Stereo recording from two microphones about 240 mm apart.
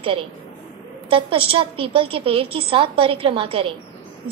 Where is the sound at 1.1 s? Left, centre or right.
Right.